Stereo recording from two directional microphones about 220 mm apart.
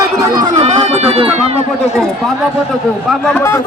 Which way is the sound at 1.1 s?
30° right (ahead or behind).